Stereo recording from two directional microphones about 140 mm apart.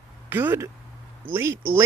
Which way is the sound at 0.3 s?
15° right (ahead or behind).